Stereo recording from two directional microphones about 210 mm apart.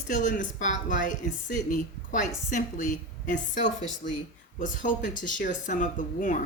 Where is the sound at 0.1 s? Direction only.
40° left (ahead or behind).